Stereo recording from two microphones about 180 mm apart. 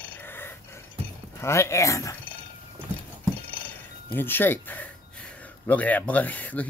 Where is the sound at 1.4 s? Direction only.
15° left (ahead or behind).